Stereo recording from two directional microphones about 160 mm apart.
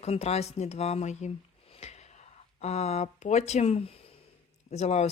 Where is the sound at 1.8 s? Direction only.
45° left (ahead or behind).